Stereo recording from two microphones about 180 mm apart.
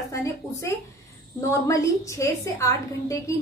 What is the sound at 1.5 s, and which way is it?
A woman's voice, 15° left (ahead or behind).